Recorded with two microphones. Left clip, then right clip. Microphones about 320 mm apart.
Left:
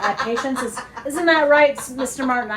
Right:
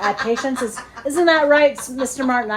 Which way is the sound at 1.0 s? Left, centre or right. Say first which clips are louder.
Right 2 dB; right.